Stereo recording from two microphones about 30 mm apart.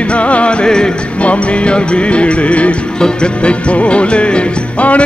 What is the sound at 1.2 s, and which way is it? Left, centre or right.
Music, left.